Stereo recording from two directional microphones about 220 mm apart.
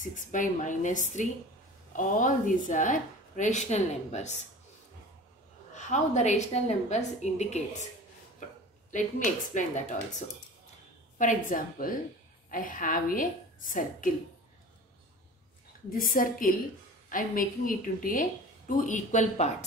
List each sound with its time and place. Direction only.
0.0 s a woman's voice: 35° left (ahead or behind)
5.8 s a woman's voice: 35° left (ahead or behind)
8.9 s a woman's voice: 35° left (ahead or behind)
11.1 s a woman's voice: 35° left (ahead or behind)
15.9 s a woman's voice: 40° left (ahead or behind)